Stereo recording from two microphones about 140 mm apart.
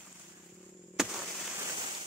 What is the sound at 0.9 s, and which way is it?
Fireworks, 5° right (ahead or behind).